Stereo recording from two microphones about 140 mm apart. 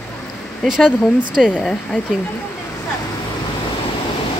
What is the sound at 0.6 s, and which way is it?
Speech, 5° right (ahead or behind).